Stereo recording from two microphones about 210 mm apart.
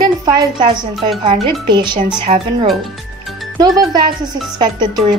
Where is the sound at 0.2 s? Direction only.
20° right (ahead or behind).